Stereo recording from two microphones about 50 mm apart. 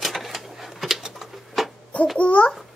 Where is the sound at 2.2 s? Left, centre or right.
Left.